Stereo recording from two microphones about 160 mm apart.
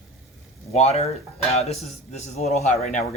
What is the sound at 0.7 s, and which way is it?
Speech, 40° left (ahead or behind).